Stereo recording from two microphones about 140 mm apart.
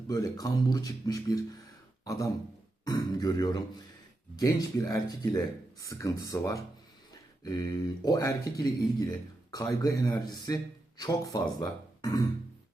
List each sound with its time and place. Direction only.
0.1 s speech: 25° left (ahead or behind)
8.0 s speech: 25° left (ahead or behind)